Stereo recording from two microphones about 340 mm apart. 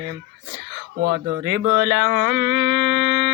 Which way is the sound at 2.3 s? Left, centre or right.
Right.